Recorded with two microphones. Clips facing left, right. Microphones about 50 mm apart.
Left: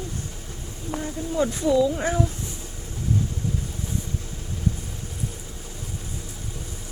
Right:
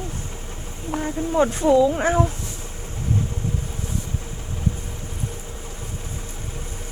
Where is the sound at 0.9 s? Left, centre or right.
Right.